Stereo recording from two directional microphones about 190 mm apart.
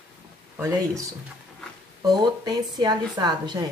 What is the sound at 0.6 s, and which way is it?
A woman's voice, 15° right (ahead or behind).